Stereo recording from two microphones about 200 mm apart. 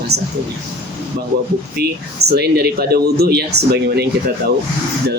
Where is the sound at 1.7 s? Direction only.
55° right (ahead or behind).